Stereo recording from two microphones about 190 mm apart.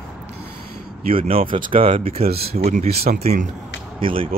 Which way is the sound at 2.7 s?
45° right (ahead or behind).